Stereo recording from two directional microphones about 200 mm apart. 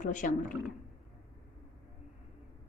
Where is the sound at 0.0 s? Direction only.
40° left (ahead or behind).